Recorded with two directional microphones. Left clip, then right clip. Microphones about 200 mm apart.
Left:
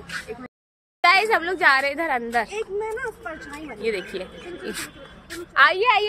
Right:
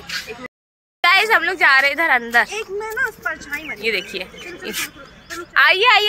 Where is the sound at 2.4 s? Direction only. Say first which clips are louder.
Right 2 dB; 15° right (ahead or behind).